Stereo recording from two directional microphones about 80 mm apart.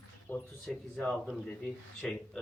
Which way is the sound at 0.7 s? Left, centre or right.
Centre.